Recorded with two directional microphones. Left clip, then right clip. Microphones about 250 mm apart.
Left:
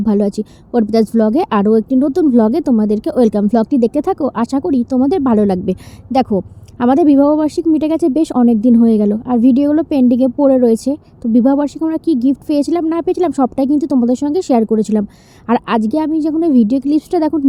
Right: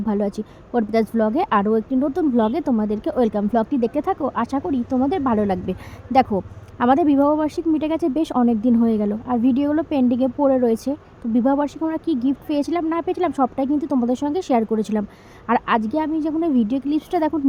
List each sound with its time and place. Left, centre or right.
0.0 s speech: left